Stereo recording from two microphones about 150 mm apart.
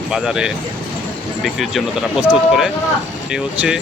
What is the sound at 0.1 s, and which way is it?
Speech, 5° right (ahead or behind).